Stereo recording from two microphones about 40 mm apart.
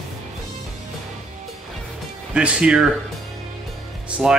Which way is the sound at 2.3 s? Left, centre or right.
Right.